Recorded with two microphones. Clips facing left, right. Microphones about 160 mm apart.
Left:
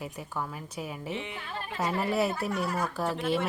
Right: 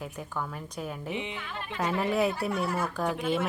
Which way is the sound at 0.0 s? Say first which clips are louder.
Even; 5° left (ahead or behind).